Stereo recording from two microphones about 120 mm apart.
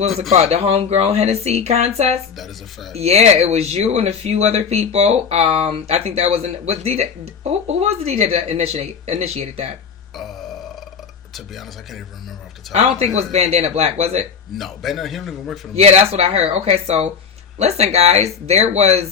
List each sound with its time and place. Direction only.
0.3 s speech: 60° right (ahead or behind)
11.3 s a man's voice: centre (ahead or behind)
12.7 s speech: 60° right (ahead or behind)
14.5 s a man's voice: centre (ahead or behind)
15.7 s speech: 60° right (ahead or behind)